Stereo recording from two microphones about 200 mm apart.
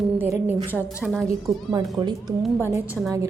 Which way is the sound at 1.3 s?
15° right (ahead or behind).